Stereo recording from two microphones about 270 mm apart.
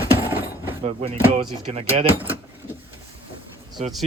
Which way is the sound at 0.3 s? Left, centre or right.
Centre.